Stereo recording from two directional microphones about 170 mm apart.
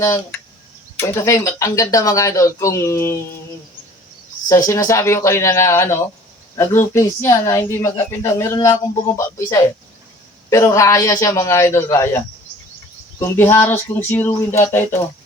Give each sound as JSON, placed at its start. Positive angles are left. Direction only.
{"t": 0.0, "sound": "speech", "side_deg": 15}
{"t": 4.4, "sound": "speech", "side_deg": 20}